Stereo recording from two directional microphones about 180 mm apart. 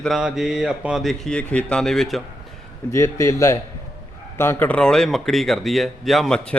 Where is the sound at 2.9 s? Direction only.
15° left (ahead or behind).